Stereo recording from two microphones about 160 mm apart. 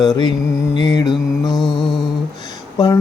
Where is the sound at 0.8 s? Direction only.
25° left (ahead or behind).